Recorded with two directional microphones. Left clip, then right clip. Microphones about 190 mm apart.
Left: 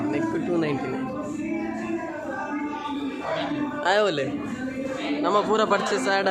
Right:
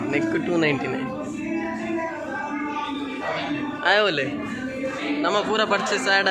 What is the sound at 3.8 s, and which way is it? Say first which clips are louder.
A man's voice: right 2 dB; 15° left (ahead or behind).